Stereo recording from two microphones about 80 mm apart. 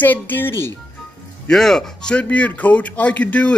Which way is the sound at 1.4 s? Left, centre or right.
Centre.